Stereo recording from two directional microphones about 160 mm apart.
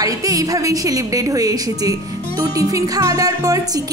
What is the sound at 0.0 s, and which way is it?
A woman's voice, 20° right (ahead or behind).